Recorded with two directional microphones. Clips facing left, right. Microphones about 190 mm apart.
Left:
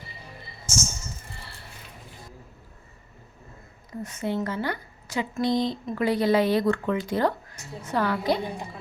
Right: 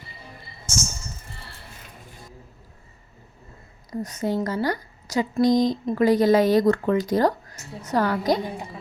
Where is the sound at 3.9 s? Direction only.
40° right (ahead or behind).